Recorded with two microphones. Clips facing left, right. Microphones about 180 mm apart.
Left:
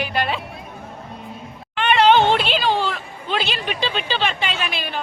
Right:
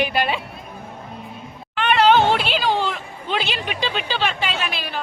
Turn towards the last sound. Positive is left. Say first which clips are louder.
# even
turn(degrees=0)  # may be behind; listen again after turning